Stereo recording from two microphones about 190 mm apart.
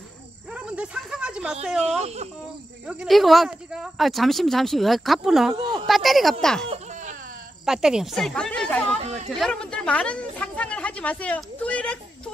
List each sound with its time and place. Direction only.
0.6 s speech: 5° right (ahead or behind)
2.0 s speech: 35° right (ahead or behind)
2.9 s a woman's voice: centre (ahead or behind)